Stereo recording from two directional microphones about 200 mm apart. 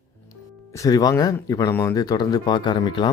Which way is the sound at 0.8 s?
15° left (ahead or behind).